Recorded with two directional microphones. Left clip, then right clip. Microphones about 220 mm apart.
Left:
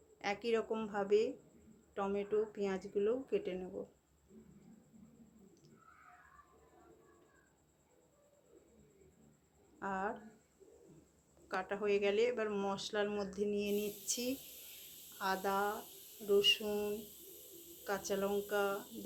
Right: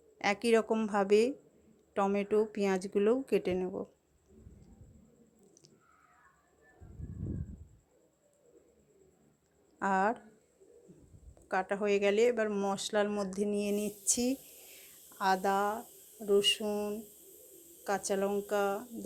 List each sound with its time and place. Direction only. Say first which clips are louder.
0.2 s speech: right 8 dB; 40° right (ahead or behind)
9.7 s speech: right 10 dB; 40° right (ahead or behind)
11.4 s speech: right 6 dB; 35° right (ahead or behind)
16.2 s a sound: right 3 dB; 30° right (ahead or behind)
17.8 s speech: right 5 dB; 35° right (ahead or behind)